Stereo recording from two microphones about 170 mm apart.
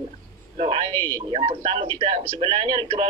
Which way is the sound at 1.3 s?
35° right (ahead or behind).